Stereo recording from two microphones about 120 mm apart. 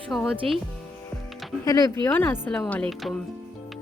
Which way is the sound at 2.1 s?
15° left (ahead or behind).